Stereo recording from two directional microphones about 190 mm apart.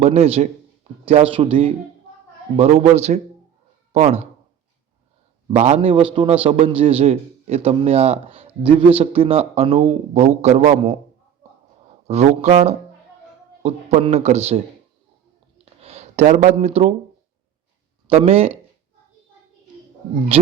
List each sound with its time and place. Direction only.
0.0 s a man's voice: 35° right (ahead or behind)
5.5 s a man's voice: 35° right (ahead or behind)
12.0 s a man's voice: 35° right (ahead or behind)
15.5 s a sound: 30° right (ahead or behind)
18.1 s a man's voice: 30° right (ahead or behind)
20.3 s a man's voice: 30° right (ahead or behind)